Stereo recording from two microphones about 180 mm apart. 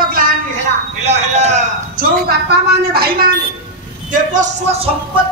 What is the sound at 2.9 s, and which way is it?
Speech, 55° right (ahead or behind).